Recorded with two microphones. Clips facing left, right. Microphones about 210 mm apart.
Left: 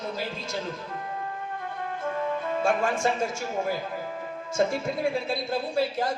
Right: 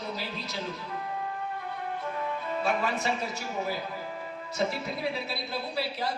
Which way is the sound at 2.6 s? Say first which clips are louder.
Left 4 dB; 50° left (ahead or behind).